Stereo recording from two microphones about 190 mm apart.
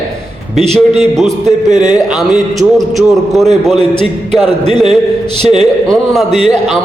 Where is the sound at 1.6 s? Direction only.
40° right (ahead or behind).